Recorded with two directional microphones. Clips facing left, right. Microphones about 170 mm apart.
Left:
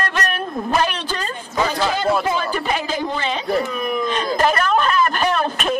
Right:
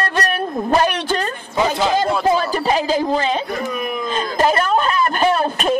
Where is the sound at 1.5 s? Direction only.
15° right (ahead or behind).